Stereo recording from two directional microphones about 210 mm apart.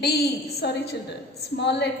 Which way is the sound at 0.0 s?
50° left (ahead or behind).